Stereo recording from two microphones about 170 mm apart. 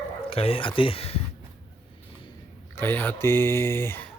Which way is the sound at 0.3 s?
35° left (ahead or behind).